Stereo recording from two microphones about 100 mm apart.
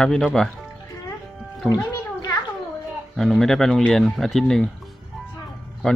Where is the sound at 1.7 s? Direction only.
45° left (ahead or behind).